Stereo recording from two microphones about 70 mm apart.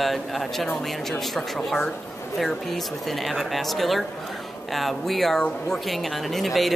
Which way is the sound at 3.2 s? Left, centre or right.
Centre.